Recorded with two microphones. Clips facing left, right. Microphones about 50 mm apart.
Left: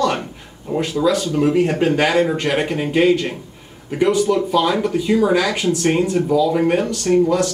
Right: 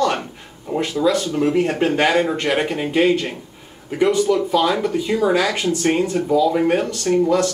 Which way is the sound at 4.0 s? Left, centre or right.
Left.